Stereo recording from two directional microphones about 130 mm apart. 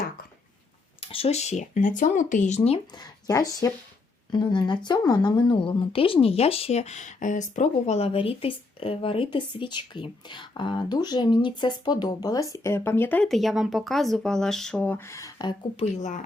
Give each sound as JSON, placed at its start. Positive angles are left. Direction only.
{"t": 1.0, "sound": "speech", "side_deg": 45}
{"t": 3.0, "sound": "speech", "side_deg": 25}
{"t": 13.2, "sound": "speech", "side_deg": 0}